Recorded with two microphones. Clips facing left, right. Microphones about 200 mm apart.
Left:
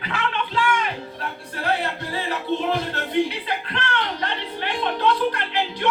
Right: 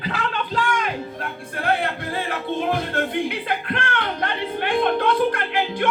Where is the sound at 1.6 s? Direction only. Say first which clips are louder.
Right 2 dB; 55° right (ahead or behind).